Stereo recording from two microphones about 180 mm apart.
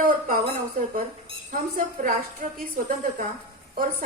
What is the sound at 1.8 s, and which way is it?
Speech, 50° right (ahead or behind).